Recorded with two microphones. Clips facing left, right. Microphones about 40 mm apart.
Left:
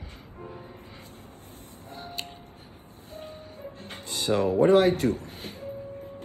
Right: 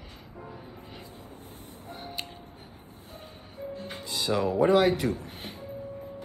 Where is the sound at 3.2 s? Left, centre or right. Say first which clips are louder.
Right 1 dB; left.